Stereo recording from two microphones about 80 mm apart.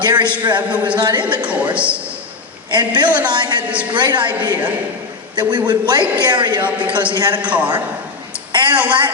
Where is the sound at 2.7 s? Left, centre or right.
Right.